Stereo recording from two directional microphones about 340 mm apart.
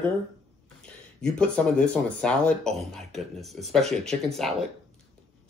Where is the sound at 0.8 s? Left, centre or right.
Centre.